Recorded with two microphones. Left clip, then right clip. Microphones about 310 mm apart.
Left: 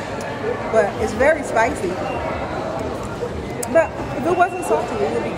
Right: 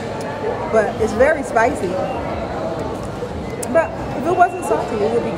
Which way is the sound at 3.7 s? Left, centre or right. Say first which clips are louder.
Even; centre.